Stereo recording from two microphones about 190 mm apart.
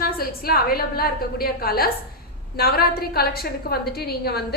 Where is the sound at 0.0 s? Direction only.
50° left (ahead or behind).